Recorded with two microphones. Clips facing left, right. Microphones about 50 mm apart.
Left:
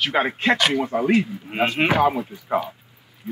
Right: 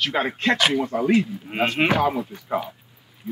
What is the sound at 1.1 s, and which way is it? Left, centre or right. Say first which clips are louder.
Speech: even; centre.